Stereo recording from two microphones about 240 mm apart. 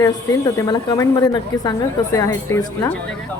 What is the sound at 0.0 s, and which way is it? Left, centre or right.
A woman's voice, centre.